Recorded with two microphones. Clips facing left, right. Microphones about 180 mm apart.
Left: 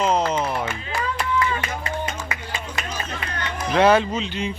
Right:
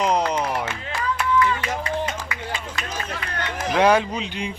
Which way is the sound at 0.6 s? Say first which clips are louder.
Left 1 dB; 70° right (ahead or behind).